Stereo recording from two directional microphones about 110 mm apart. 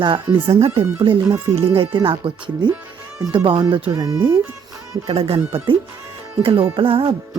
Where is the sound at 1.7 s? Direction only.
50° right (ahead or behind).